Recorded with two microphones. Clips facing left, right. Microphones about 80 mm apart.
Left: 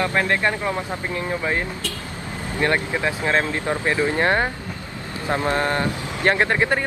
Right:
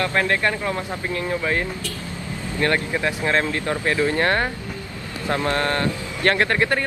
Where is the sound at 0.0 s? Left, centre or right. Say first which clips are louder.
Even; centre.